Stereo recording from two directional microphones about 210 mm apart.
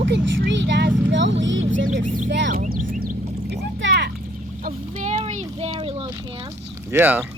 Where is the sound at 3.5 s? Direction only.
55° right (ahead or behind).